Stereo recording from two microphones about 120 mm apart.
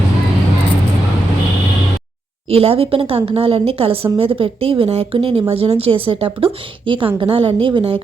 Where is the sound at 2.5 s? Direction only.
55° right (ahead or behind).